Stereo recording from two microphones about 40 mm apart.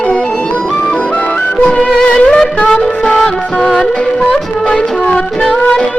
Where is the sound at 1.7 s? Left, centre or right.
Centre.